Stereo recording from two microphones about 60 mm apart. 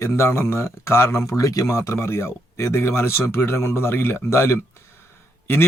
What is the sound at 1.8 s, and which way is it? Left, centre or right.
A man's voice, left.